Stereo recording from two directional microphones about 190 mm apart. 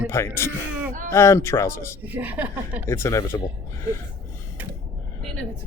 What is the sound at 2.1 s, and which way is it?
Speech, 10° right (ahead or behind).